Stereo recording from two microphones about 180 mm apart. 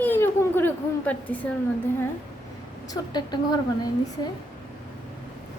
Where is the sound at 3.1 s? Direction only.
25° left (ahead or behind).